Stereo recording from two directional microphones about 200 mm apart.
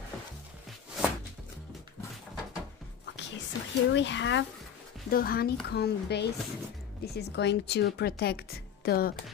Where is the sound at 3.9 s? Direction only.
65° left (ahead or behind).